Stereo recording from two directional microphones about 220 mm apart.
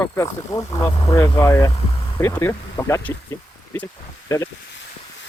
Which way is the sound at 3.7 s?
10° left (ahead or behind).